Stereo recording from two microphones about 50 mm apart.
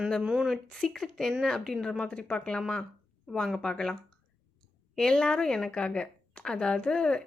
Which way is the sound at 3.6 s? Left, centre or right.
Centre.